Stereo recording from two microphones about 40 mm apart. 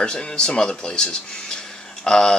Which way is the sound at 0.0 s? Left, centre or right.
Left.